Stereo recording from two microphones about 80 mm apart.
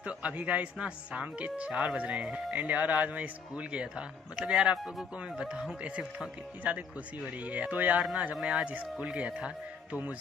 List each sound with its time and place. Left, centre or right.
0.0 s speech: centre